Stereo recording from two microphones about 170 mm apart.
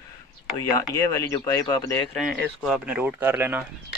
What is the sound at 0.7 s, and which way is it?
Speech, 20° left (ahead or behind).